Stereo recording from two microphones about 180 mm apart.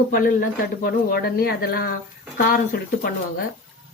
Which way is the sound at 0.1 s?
55° left (ahead or behind).